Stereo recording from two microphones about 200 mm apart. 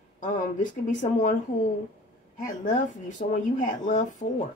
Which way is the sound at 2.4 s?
40° left (ahead or behind).